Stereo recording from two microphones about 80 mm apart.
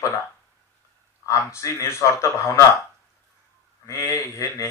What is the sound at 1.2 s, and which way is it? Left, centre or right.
Speech, left.